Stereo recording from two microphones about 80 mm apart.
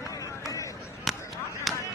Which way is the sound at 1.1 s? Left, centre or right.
Centre.